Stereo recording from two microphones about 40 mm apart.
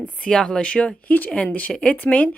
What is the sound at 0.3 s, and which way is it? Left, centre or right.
Speech, centre.